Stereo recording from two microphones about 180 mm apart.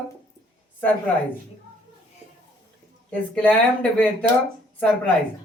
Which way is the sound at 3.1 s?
5° left (ahead or behind).